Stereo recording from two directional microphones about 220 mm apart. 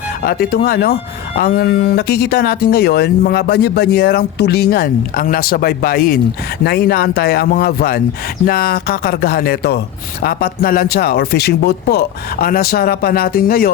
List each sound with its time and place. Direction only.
0.2 s speech: 45° left (ahead or behind)